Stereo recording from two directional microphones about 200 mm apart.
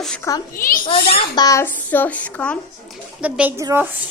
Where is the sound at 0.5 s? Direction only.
45° left (ahead or behind).